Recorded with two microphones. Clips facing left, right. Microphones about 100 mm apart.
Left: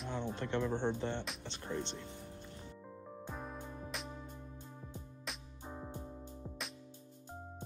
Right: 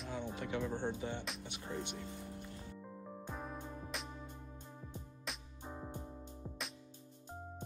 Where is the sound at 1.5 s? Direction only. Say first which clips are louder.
Left 4 dB; 15° right (ahead or behind).